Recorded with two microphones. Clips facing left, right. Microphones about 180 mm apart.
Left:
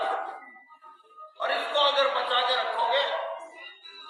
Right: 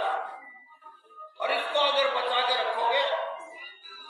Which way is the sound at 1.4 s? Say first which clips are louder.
Even; 10° right (ahead or behind).